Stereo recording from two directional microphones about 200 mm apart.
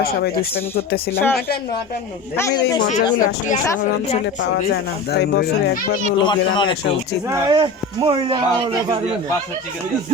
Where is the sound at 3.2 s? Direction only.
40° left (ahead or behind).